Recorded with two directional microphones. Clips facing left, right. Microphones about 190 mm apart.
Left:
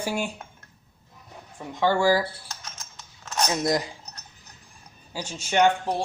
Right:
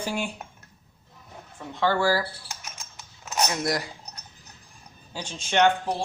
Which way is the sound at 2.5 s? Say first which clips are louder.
Even; 10° right (ahead or behind).